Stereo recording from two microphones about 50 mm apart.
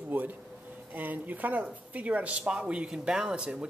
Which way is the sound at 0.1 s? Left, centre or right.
Right.